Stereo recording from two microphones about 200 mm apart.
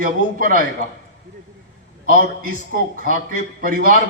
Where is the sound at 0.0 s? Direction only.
45° right (ahead or behind).